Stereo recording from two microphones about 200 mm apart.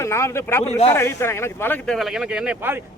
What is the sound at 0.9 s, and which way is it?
Speech, 10° left (ahead or behind).